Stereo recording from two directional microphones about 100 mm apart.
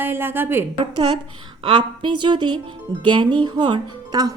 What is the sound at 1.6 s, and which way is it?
A woman's voice, 55° right (ahead or behind).